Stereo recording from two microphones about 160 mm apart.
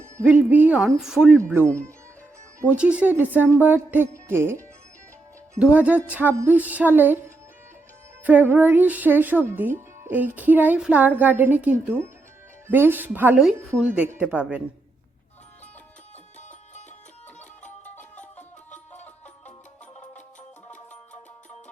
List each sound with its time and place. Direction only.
0.3 s speech: 10° right (ahead or behind)
2.6 s speech: 10° right (ahead or behind)
8.2 s speech: 10° right (ahead or behind)
17.9 s music: 10° left (ahead or behind)